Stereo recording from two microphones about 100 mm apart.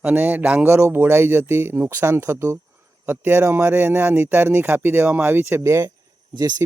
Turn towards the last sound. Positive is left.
turn(degrees=-40)  # may be behind; listen again after turning